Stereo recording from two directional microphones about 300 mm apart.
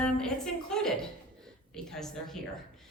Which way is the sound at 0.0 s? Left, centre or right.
Centre.